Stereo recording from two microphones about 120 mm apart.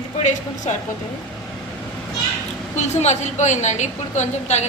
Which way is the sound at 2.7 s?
70° left (ahead or behind).